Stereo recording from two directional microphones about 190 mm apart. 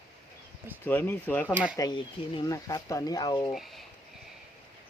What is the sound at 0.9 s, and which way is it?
Speech, 10° left (ahead or behind).